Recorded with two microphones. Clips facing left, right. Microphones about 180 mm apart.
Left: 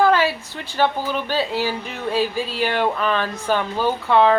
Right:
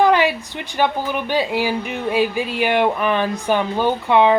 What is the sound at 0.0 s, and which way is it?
A woman's voice, 15° right (ahead or behind).